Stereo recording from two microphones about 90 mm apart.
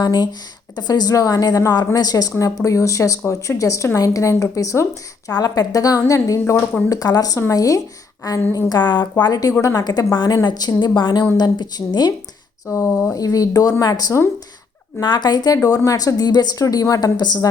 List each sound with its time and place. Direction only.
0.0 s speech: 45° left (ahead or behind)
8.5 s speech: 50° left (ahead or behind)
12.6 s speech: 25° left (ahead or behind)
13.1 s speech: 40° left (ahead or behind)
15.5 s speech: 40° left (ahead or behind)